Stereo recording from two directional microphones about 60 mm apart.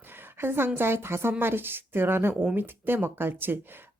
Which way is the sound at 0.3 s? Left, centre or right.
Right.